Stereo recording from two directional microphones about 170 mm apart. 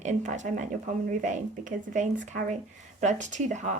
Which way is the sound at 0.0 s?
45° right (ahead or behind).